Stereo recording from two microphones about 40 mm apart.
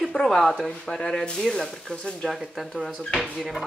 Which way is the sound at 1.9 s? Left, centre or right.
Left.